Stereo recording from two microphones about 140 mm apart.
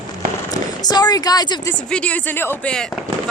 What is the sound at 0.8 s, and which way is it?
Speech, 30° left (ahead or behind).